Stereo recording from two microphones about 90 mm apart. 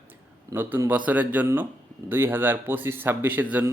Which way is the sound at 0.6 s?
25° right (ahead or behind).